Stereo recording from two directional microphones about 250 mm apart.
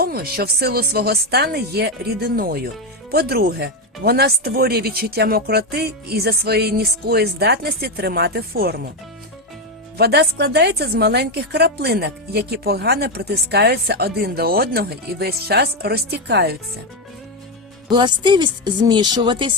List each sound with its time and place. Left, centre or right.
0.0 s a woman's voice: right
10.0 s a woman's voice: right
17.8 s a woman's voice: centre